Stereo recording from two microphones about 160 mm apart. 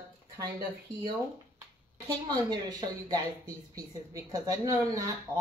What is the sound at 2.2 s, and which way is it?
Speech, 25° right (ahead or behind).